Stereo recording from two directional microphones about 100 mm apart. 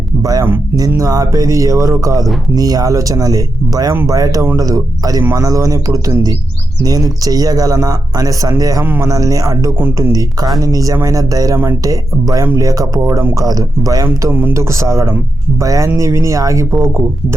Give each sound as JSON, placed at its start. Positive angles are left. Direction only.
{"t": 0.2, "sound": "speech", "side_deg": -40}
{"t": 8.8, "sound": "speech", "side_deg": -20}
{"t": 9.0, "sound": "speech", "side_deg": -35}
{"t": 9.7, "sound": "speech", "side_deg": -20}
{"t": 10.1, "sound": "speech", "side_deg": -40}
{"t": 14.3, "sound": "speech", "side_deg": -25}